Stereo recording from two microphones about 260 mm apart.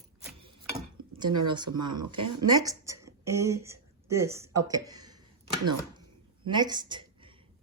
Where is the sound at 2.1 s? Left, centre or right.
Centre.